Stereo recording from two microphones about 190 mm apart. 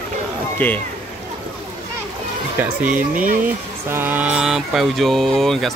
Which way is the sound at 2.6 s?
10° right (ahead or behind).